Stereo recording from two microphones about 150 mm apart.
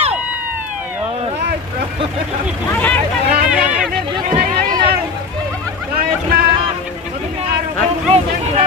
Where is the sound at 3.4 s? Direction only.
5° right (ahead or behind).